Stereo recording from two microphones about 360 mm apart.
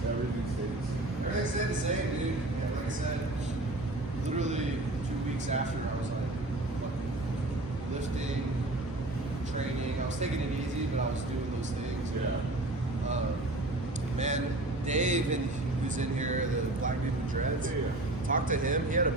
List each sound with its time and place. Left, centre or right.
14.2 s speech: centre
18.3 s speech: right